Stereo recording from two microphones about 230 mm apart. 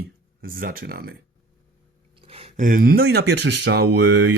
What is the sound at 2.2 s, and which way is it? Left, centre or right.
Speech, right.